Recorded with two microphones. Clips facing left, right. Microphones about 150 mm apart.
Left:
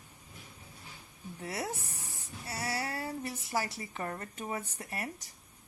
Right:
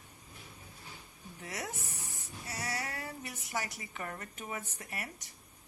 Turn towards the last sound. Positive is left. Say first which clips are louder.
# left 4 dB
turn(degrees=35)  # may be behind; listen again after turning